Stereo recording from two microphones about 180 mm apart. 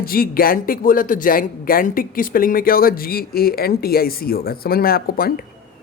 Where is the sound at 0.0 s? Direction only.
55° left (ahead or behind).